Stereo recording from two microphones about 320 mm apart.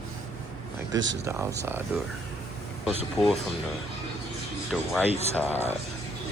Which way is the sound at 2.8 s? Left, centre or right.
Centre.